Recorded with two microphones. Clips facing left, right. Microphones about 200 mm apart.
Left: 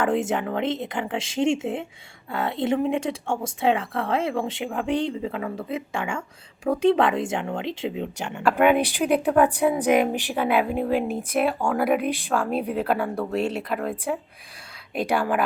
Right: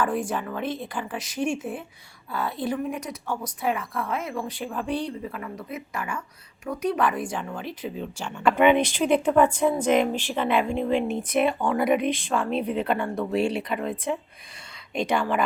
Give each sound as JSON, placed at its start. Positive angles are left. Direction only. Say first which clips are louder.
{"t": 0.0, "sound": "speech", "louder": "left 3 dB", "side_deg": 25}
{"t": 0.3, "sound": "speech", "louder": "left 4 dB", "side_deg": 70}
{"t": 0.6, "sound": "speech", "louder": "left 4 dB", "side_deg": 20}
{"t": 5.2, "sound": "speech", "louder": "left 5 dB", "side_deg": 90}
{"t": 5.6, "sound": "speech", "louder": "left 5 dB", "side_deg": 25}
{"t": 8.4, "sound": "speech", "louder": "even", "side_deg": 5}
{"t": 14.9, "sound": "speech", "louder": "left 1 dB", "side_deg": 5}